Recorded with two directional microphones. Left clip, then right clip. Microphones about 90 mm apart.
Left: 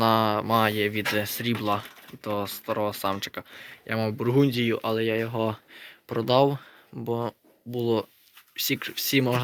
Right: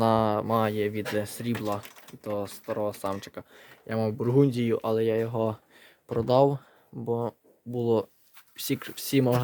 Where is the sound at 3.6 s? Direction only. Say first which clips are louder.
Left 1 dB; 35° right (ahead or behind).